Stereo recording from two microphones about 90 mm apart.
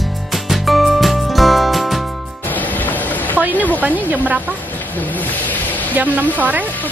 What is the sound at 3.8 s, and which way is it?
Speech, 20° right (ahead or behind).